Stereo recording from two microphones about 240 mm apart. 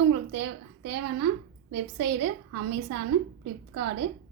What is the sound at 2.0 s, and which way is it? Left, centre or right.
Speech, right.